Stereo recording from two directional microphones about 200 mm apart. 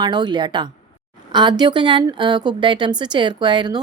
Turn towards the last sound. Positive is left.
turn(degrees=-20)  # may be behind; listen again after turning